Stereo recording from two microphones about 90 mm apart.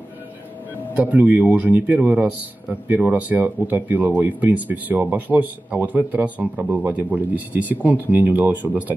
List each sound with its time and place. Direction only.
0.9 s speech: 20° right (ahead or behind)